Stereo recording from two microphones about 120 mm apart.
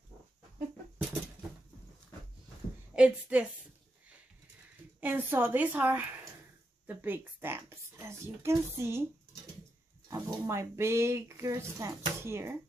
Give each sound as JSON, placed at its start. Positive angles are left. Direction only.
{"t": 2.9, "sound": "a woman's voice", "side_deg": -10}
{"t": 5.0, "sound": "a woman's voice", "side_deg": -15}
{"t": 10.0, "sound": "speech", "side_deg": -30}